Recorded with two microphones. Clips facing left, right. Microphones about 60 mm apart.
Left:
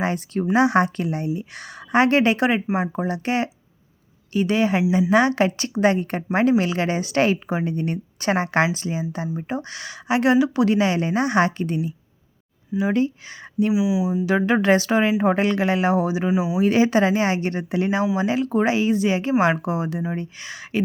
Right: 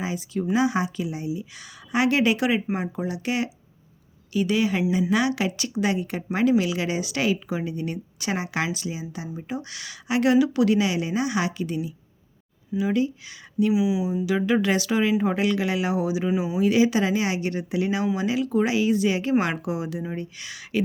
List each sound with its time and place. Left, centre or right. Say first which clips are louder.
0.0 s a woman's voice: left 4 dB; left
13.7 s speech: left 2 dB; centre
14.3 s a woman's voice: left 4 dB; left
16.3 s speech: left 3 dB; centre
16.6 s a woman's voice: left 2 dB; left